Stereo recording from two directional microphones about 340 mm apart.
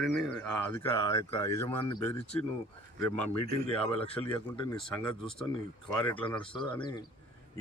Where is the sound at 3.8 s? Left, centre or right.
Centre.